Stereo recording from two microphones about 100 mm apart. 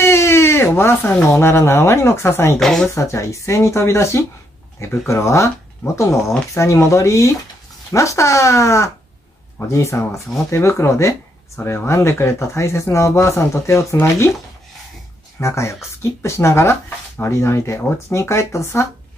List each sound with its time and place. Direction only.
0.0 s a sound: 25° left (ahead or behind)
1.4 s speech: 25° left (ahead or behind)
2.6 s speech: 5° left (ahead or behind)
2.9 s speech: 30° left (ahead or behind)
15.4 s speech: 30° left (ahead or behind)